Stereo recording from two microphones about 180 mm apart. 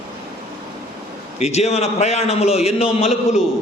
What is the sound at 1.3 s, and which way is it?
A man's voice, 35° left (ahead or behind).